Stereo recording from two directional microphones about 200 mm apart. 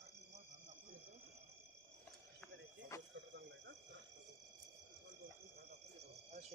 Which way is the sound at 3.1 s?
60° right (ahead or behind).